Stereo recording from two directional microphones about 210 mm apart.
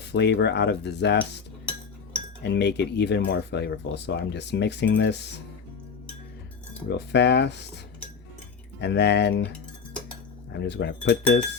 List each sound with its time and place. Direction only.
0.0 s speech: 55° left (ahead or behind)
2.4 s speech: 55° left (ahead or behind)
6.9 s speech: 55° left (ahead or behind)
8.8 s speech: 55° left (ahead or behind)
9.4 s cutlery: 5° left (ahead or behind)
10.6 s speech: 55° left (ahead or behind)